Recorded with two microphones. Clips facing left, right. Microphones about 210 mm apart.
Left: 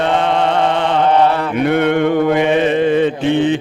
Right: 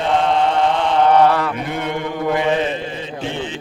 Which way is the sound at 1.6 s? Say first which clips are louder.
Left 10 dB; 65° left (ahead or behind).